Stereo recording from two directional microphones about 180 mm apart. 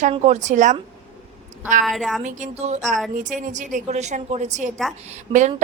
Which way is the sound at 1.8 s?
Centre (ahead or behind).